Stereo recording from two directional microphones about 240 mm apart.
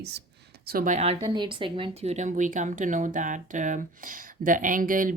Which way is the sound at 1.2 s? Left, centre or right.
Centre.